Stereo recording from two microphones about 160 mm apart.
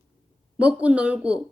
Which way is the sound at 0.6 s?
10° right (ahead or behind).